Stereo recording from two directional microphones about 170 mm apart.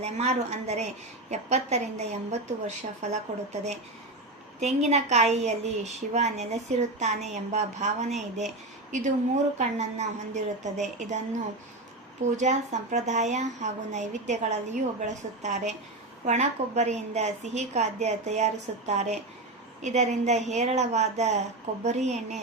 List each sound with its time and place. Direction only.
0.0 s a woman's voice: 40° right (ahead or behind)
4.6 s a woman's voice: 40° right (ahead or behind)
12.4 s a woman's voice: 45° right (ahead or behind)